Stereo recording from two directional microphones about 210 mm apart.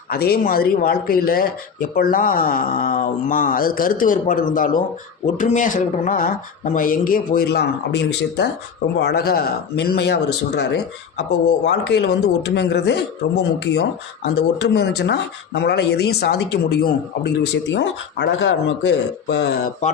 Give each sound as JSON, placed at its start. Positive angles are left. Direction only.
{"t": 0.1, "sound": "speech", "side_deg": 45}
{"t": 11.6, "sound": "speech", "side_deg": 55}